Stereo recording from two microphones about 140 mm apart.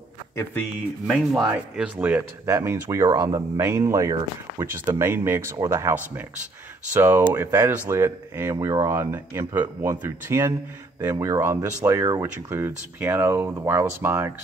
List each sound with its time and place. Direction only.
1.0 s speech: centre (ahead or behind); by 3.4 s 30° right (ahead or behind)
3.5 s speech: 15° right (ahead or behind)